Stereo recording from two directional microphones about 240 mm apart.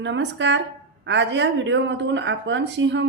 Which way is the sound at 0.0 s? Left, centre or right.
Right.